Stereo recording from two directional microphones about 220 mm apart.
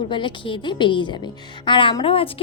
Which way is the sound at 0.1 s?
20° left (ahead or behind).